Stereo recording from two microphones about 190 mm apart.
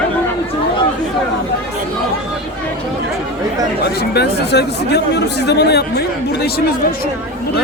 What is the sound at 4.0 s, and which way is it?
Speech, 60° left (ahead or behind).